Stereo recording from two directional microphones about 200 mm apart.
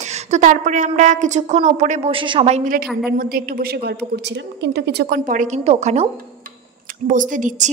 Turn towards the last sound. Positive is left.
turn(degrees=-40)  # may be behind; listen again after turning